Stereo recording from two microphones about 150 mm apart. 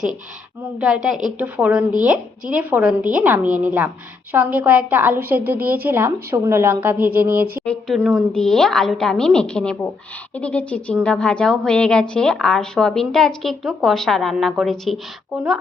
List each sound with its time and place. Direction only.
0.8 s a woman's voice: 5° right (ahead or behind)
7.3 s speech: 80° right
7.6 s speech: 5° left (ahead or behind)
7.9 s a woman's voice: 10° right (ahead or behind)
8.3 s a woman's voice: 5° left (ahead or behind)